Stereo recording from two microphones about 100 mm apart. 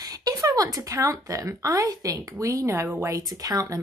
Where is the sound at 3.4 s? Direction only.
35° right (ahead or behind).